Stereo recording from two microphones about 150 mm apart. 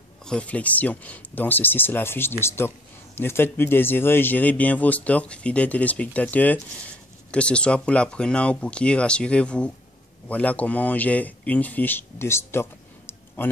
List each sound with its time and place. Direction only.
0.2 s a man's voice: 5° left (ahead or behind)